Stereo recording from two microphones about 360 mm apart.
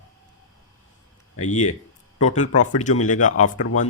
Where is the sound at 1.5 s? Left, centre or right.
Centre.